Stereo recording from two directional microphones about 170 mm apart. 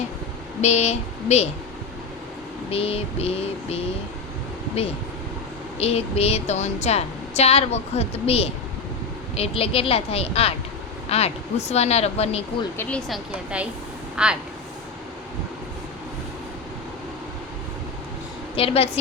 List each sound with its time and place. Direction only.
0.6 s a woman's voice: 40° left (ahead or behind)
2.6 s a woman's voice: 35° left (ahead or behind)
5.8 s a woman's voice: 35° left (ahead or behind)
12.7 s speech: 15° left (ahead or behind)
13.1 s speech: 5° right (ahead or behind)
18.5 s a woman's voice: 35° left (ahead or behind)